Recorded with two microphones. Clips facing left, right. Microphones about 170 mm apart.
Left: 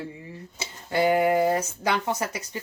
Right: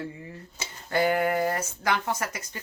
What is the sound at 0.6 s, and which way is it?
Speech, 20° left (ahead or behind).